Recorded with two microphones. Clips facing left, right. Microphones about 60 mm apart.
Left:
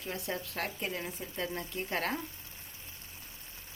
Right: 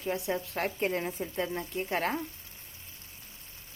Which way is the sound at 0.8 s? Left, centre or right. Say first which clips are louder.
Right 7 dB; right.